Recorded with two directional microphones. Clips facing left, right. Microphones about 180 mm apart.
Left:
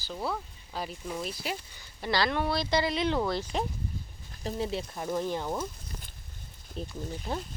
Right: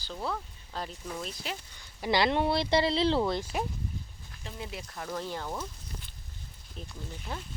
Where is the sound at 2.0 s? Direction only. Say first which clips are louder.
Right 2 dB; 20° right (ahead or behind).